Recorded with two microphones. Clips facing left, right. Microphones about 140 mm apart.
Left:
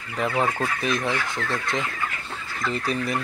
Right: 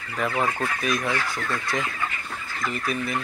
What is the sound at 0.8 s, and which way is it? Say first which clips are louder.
Speech: even; 25° left (ahead or behind).